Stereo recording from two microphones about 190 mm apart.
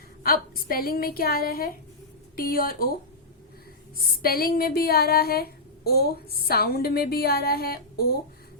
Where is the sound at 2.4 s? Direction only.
50° left (ahead or behind).